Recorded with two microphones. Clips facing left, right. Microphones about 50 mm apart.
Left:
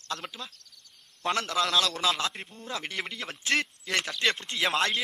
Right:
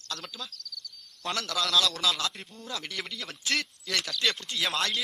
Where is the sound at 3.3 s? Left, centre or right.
Centre.